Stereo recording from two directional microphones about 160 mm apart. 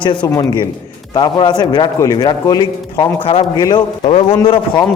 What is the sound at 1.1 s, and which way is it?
A man's voice, 25° left (ahead or behind).